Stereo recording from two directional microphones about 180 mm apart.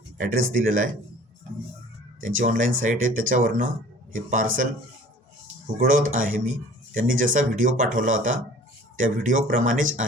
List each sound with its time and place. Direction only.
0.5 s speech: 45° right (ahead or behind)
2.2 s speech: 45° right (ahead or behind)
5.7 s speech: 50° right (ahead or behind)